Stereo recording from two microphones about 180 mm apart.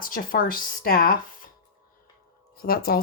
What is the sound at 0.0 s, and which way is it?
Speech, 50° left (ahead or behind).